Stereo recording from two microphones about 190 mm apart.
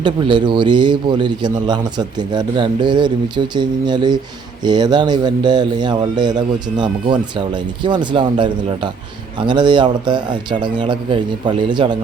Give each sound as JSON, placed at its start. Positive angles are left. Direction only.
{"t": 0.0, "sound": "speech", "side_deg": -25}